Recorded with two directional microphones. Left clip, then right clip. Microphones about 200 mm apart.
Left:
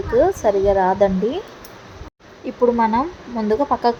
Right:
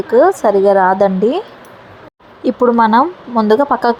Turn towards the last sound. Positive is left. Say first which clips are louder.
# right 6 dB
turn(degrees=-15)  # may be behind; listen again after turning